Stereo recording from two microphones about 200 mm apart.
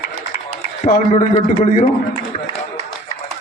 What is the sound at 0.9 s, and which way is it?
A man's voice, 40° left (ahead or behind).